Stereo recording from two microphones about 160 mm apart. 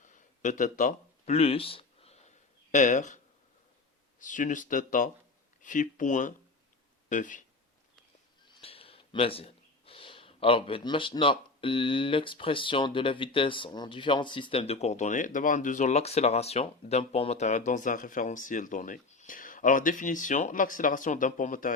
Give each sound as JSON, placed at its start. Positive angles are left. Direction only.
{"t": 0.0, "sound": "a sound", "side_deg": 50}
{"t": 2.7, "sound": "speech", "side_deg": 50}
{"t": 4.2, "sound": "speech", "side_deg": 55}
{"t": 8.6, "sound": "speech", "side_deg": 35}